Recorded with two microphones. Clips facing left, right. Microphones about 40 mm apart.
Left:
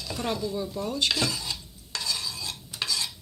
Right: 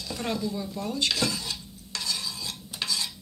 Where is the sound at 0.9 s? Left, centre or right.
Left.